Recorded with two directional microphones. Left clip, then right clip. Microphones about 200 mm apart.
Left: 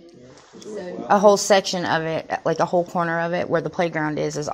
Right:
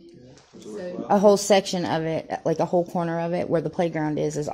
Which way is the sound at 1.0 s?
30° right (ahead or behind).